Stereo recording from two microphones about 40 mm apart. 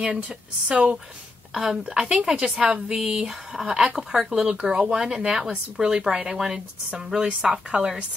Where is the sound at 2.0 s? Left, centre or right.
Right.